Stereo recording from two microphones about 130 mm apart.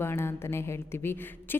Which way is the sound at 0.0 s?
20° left (ahead or behind).